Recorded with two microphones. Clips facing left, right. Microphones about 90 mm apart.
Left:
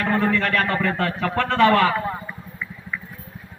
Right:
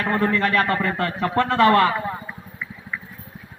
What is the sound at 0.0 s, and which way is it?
A man's voice, 5° right (ahead or behind).